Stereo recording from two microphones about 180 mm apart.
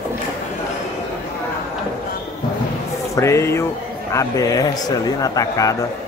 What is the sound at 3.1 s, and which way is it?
A man's voice, 15° left (ahead or behind).